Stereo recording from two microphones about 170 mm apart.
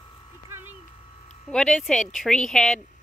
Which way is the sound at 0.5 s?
10° right (ahead or behind).